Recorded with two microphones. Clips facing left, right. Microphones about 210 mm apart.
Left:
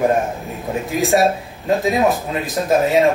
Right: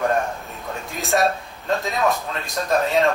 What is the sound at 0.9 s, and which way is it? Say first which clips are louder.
Speech: left 13 dB; centre (ahead or behind).